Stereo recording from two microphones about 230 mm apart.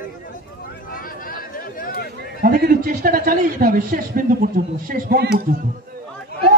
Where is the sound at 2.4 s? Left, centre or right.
Right.